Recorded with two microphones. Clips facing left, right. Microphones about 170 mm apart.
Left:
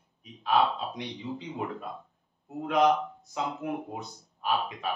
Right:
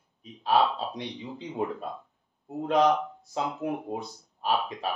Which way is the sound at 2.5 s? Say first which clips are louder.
Right 2 dB; 30° right (ahead or behind).